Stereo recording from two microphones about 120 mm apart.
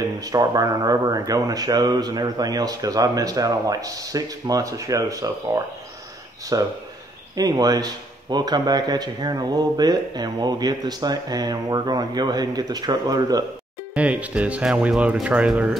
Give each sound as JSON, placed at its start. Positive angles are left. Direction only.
{"t": 0.2, "sound": "speech", "side_deg": -30}
{"t": 13.9, "sound": "speech", "side_deg": -10}